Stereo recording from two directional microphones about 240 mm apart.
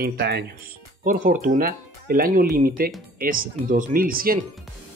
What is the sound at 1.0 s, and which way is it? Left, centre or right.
Speech, right.